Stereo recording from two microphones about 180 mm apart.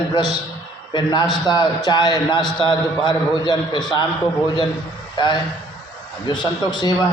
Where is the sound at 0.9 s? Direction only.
25° left (ahead or behind).